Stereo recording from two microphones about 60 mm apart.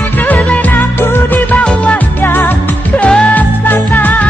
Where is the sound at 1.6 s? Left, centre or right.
Centre.